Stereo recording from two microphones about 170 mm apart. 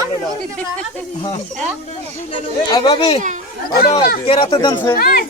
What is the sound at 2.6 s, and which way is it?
Speech, 25° left (ahead or behind).